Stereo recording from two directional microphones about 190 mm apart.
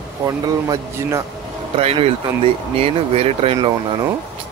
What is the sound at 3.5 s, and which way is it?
Speech, 20° right (ahead or behind).